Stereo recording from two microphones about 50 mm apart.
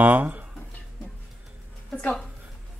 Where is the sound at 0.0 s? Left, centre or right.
Right.